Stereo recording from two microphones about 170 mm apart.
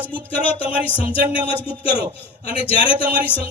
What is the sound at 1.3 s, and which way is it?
Speech, 30° left (ahead or behind).